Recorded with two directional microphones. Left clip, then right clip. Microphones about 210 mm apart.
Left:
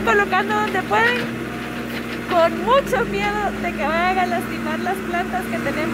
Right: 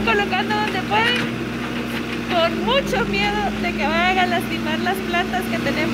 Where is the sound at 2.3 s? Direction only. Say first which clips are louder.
Left 3 dB; 25° left (ahead or behind).